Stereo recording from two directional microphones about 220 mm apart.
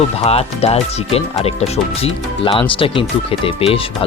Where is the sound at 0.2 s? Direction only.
25° left (ahead or behind).